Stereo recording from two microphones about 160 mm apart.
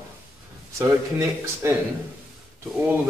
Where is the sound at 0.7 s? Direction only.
20° right (ahead or behind).